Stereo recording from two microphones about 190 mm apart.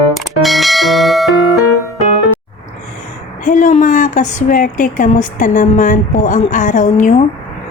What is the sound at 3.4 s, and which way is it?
A woman's voice, 40° left (ahead or behind).